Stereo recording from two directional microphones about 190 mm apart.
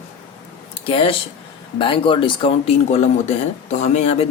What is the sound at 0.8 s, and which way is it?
Speech, 30° left (ahead or behind).